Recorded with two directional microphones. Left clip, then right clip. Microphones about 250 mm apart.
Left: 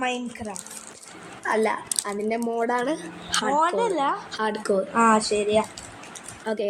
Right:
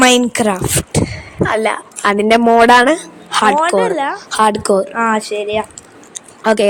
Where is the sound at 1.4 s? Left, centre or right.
Right.